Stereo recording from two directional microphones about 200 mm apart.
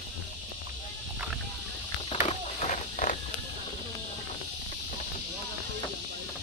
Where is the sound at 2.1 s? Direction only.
35° left (ahead or behind).